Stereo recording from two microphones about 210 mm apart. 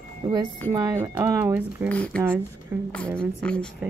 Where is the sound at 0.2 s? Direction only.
20° right (ahead or behind).